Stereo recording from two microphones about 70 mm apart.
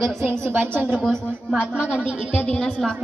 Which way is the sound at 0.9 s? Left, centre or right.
Centre.